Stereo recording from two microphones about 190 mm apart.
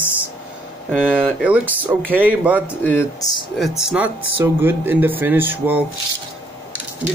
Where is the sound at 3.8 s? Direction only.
5° right (ahead or behind).